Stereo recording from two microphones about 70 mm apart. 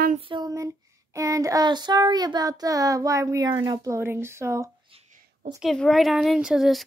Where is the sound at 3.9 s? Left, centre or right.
Right.